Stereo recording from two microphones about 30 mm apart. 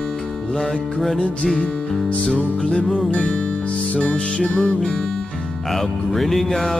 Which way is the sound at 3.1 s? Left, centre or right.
Left.